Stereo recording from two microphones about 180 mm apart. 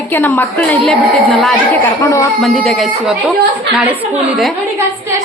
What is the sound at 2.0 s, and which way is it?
Speech, 15° left (ahead or behind).